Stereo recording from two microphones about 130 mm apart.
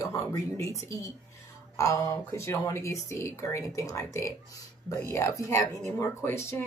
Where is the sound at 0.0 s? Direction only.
25° left (ahead or behind).